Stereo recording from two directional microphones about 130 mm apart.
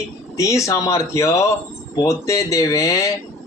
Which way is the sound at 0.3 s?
25° left (ahead or behind).